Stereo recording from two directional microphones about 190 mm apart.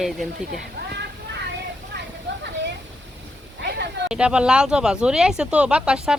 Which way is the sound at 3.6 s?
65° right (ahead or behind).